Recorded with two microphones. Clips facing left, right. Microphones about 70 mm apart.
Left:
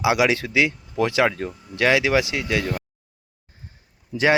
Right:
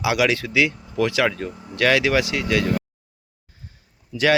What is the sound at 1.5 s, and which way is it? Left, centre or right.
Speech, right.